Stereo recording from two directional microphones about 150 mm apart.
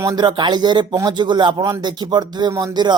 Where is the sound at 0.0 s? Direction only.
25° right (ahead or behind).